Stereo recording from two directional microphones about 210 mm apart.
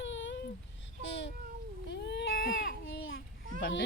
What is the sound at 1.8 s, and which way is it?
Baby cry, 55° left (ahead or behind).